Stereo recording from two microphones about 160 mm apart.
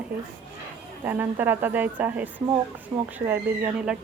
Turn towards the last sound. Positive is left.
turn(degrees=-10)  # may be behind; listen again after turning